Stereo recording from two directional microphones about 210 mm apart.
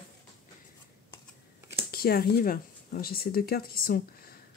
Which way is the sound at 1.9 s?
45° left (ahead or behind).